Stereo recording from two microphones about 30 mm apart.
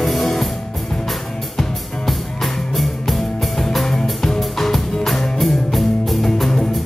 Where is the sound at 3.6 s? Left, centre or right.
Centre.